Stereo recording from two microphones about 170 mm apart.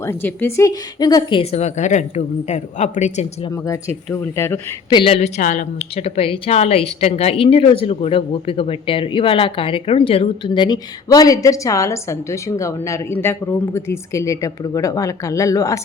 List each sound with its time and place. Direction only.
0.0 s speech: 15° left (ahead or behind)
1.4 s a woman's voice: 40° left (ahead or behind)
3.5 s speech: 15° left (ahead or behind)
4.9 s a woman's voice: 35° left (ahead or behind)
5.4 s a woman's voice: 50° left (ahead or behind); by 15.8 s 20° left (ahead or behind)